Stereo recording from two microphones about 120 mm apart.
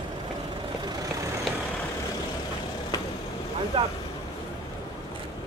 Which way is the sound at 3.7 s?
45° right (ahead or behind).